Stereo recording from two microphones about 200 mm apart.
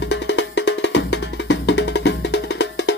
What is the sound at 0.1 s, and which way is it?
Music, 65° left (ahead or behind).